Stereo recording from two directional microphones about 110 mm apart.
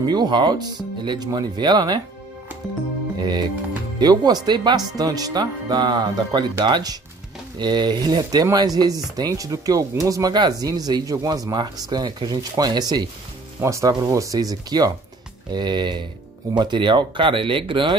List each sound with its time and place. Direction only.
0.0 s speech: 40° right (ahead or behind)
3.2 s music: 40° right (ahead or behind)
4.0 s speech: 40° right (ahead or behind)
13.6 s speech: 25° right (ahead or behind); by 17.9 s 50° right (ahead or behind)